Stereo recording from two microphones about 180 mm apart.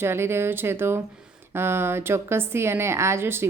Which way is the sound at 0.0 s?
15° right (ahead or behind).